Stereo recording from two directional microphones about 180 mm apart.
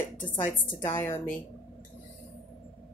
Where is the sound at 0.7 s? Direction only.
15° left (ahead or behind).